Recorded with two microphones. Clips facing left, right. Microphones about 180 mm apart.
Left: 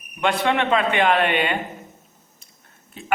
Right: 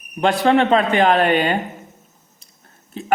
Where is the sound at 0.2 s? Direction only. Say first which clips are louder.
Right 5 dB; 35° right (ahead or behind).